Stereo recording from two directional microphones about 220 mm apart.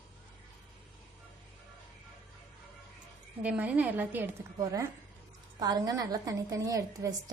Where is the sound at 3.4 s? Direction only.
5° right (ahead or behind).